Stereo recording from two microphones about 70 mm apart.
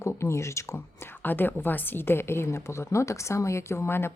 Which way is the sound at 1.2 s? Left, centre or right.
Left.